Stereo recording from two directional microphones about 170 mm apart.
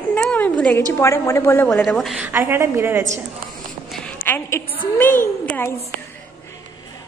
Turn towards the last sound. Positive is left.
turn(degrees=10)  # may be behind; listen again after turning